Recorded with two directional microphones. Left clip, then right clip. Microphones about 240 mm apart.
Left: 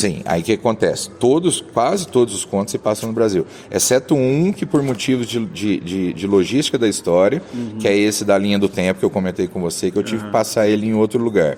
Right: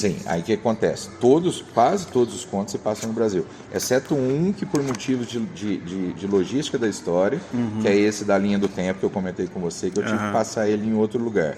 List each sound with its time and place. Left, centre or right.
0.0 s speech: left